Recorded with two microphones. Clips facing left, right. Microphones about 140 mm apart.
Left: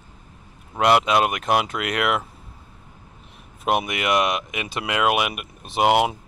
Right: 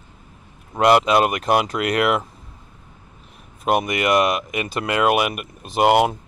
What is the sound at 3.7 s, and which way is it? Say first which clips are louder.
Speech: right 3 dB; centre (ahead or behind).